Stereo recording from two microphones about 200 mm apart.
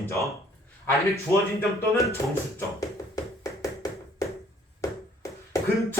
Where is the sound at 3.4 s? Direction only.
15° left (ahead or behind).